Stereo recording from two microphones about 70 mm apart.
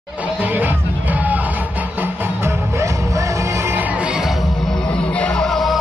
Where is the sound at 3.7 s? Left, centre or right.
Right.